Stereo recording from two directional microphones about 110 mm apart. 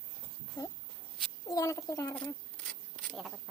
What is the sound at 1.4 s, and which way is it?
Speech, 30° left (ahead or behind).